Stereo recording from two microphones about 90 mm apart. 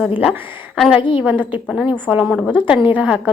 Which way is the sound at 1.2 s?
20° right (ahead or behind).